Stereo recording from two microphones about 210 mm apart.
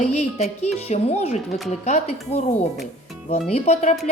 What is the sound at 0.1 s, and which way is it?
Speech, 30° left (ahead or behind).